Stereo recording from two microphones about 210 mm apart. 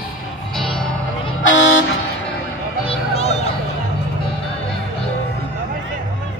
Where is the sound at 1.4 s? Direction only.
65° left (ahead or behind).